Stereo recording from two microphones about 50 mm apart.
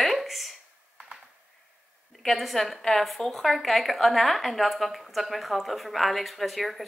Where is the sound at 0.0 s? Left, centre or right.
Centre.